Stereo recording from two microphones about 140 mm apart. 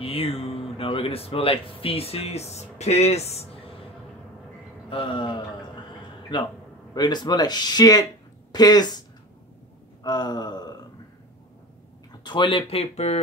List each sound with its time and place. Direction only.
0.0 s speech: 45° left (ahead or behind)
4.8 s gasp: 35° left (ahead or behind)
6.9 s speech: 30° left (ahead or behind)
10.0 s gasp: 30° left (ahead or behind)
12.2 s speech: 35° left (ahead or behind)